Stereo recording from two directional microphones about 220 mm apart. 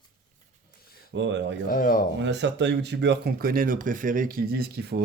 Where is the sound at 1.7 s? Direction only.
40° left (ahead or behind).